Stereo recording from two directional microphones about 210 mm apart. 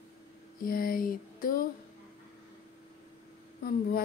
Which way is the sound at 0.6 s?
45° left (ahead or behind).